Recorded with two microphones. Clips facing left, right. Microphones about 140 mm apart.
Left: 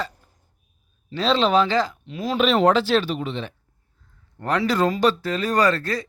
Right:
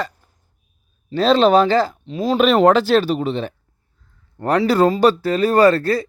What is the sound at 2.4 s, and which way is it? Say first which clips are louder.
Speech: right 4 dB; 45° right (ahead or behind).